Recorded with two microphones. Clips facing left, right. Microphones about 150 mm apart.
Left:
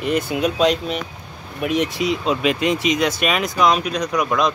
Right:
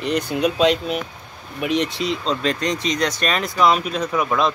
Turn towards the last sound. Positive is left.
turn(degrees=0)  # may be behind; listen again after turning